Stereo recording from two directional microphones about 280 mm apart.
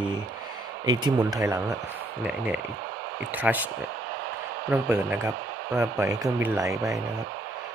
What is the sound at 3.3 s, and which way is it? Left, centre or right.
Speech, centre.